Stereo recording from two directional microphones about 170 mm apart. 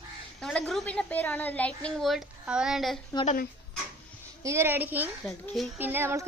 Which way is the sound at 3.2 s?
55° left (ahead or behind).